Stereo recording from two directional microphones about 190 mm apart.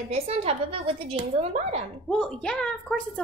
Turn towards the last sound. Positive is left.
turn(degrees=5)  # may be behind; listen again after turning